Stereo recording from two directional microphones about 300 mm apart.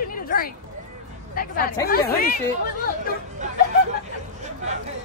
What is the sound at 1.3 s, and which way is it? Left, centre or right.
Speech, left.